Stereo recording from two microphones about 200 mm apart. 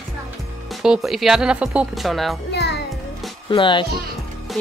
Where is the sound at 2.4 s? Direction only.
55° left (ahead or behind).